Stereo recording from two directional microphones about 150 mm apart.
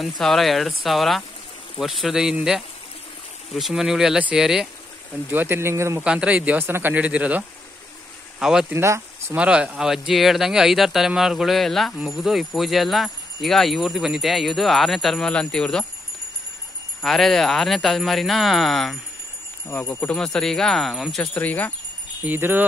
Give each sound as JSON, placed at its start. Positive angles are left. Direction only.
{"t": 0.0, "sound": "speech", "side_deg": 0}
{"t": 5.3, "sound": "speech", "side_deg": -15}
{"t": 6.0, "sound": "speech", "side_deg": -5}
{"t": 8.7, "sound": "speech", "side_deg": -15}
{"t": 9.4, "sound": "speech", "side_deg": -5}
{"t": 17.0, "sound": "speech", "side_deg": 0}
{"t": 19.7, "sound": "speech", "side_deg": 15}
{"t": 22.2, "sound": "speech", "side_deg": -15}